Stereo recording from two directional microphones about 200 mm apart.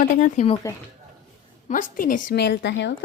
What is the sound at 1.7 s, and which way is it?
A woman's voice, 40° left (ahead or behind).